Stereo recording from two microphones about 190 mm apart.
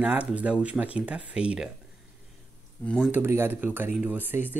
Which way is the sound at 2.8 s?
5° left (ahead or behind).